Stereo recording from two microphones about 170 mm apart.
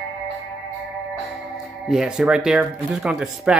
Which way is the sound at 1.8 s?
5° right (ahead or behind).